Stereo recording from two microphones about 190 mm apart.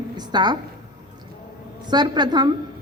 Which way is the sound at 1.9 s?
25° right (ahead or behind).